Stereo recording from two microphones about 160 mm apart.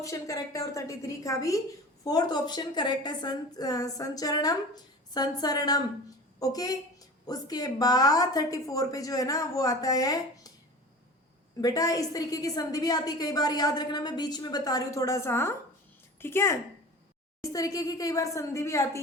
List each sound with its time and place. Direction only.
0.0 s a woman's voice: 20° left (ahead or behind)
11.6 s a woman's voice: 20° left (ahead or behind)